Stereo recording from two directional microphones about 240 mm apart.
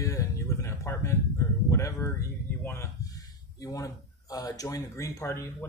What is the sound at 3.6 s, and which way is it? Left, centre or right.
Speech, centre.